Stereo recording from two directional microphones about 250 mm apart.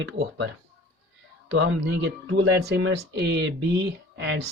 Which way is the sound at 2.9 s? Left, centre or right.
Right.